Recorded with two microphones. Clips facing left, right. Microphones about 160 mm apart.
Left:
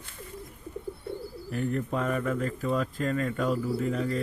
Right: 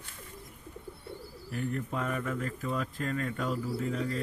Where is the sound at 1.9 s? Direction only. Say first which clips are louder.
Left 5 dB; 45° left (ahead or behind).